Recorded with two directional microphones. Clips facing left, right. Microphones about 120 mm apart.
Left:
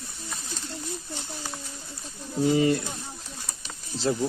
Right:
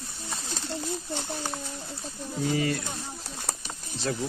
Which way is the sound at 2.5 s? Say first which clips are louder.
Left 6 dB; 25° left (ahead or behind).